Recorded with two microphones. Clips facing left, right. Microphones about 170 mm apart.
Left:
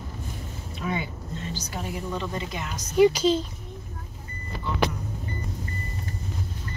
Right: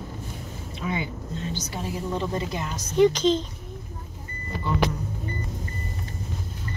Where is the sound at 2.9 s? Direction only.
10° left (ahead or behind).